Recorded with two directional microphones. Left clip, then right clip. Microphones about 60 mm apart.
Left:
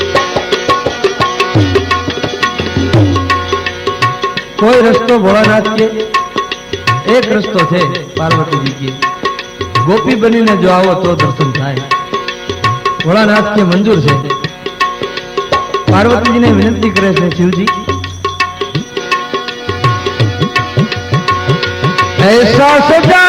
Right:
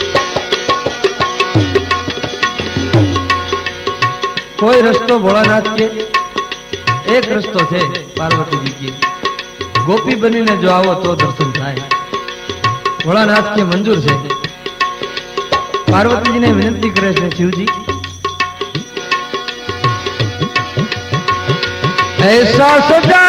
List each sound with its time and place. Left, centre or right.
0.0 s music: right
4.6 s music: right
6.8 s music: right
13.1 s music: centre
13.5 s music: right
15.4 s music: right
17.5 s music: right
19.8 s music: right